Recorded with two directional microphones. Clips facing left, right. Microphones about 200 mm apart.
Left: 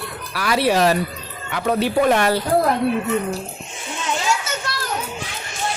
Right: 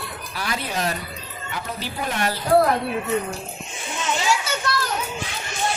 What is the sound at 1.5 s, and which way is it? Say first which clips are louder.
Speech: left 12 dB; 65° left (ahead or behind).